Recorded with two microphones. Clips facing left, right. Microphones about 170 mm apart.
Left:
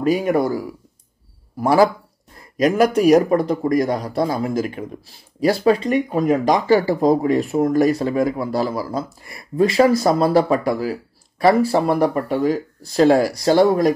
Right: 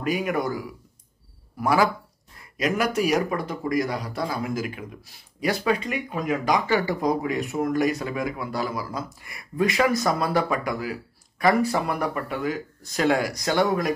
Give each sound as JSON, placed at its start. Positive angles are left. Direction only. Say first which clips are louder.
{"t": 0.0, "sound": "speech", "louder": "left 7 dB", "side_deg": 35}